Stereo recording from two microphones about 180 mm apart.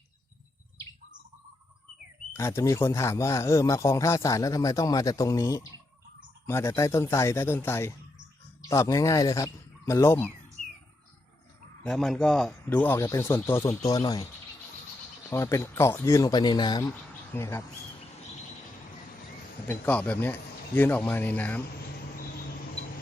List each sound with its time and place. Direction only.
2.3 s a man's voice: 15° left (ahead or behind)
11.8 s a man's voice: centre (ahead or behind); by 14.3 s 20° left (ahead or behind)
15.3 s a man's voice: 15° left (ahead or behind)
19.6 s a man's voice: 10° left (ahead or behind)